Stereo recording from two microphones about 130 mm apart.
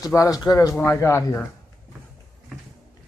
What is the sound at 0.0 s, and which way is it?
Speech, 25° left (ahead or behind).